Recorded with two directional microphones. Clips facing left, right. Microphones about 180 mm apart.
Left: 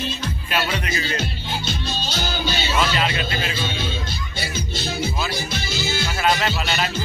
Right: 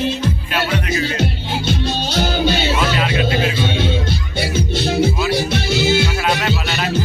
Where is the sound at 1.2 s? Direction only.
60° right (ahead or behind).